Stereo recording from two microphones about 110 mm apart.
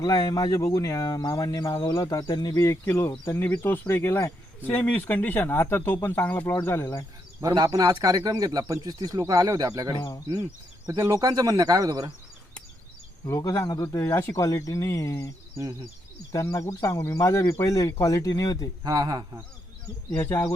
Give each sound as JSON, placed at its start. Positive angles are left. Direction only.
{"t": 0.0, "sound": "speech", "side_deg": 35}
{"t": 7.4, "sound": "speech", "side_deg": -35}
{"t": 13.2, "sound": "speech", "side_deg": 30}
{"t": 14.0, "sound": "speech", "side_deg": 20}
{"t": 16.3, "sound": "speech", "side_deg": 30}
{"t": 18.8, "sound": "speech", "side_deg": -35}
{"t": 20.1, "sound": "speech", "side_deg": 15}